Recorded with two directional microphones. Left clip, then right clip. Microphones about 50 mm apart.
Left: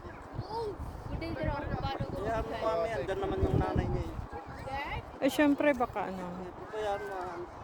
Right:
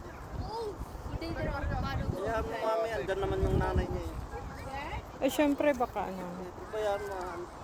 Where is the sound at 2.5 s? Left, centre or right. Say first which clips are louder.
Even; left.